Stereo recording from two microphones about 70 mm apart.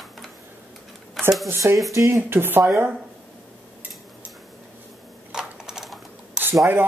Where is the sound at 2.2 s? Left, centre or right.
Right.